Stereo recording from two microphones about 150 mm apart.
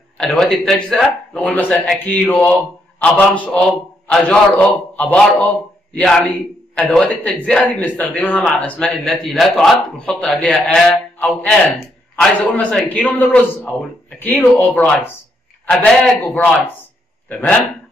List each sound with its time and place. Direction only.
0.2 s a man's voice: 5° left (ahead or behind)